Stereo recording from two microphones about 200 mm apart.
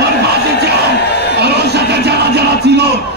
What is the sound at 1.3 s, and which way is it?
Music, 55° right (ahead or behind).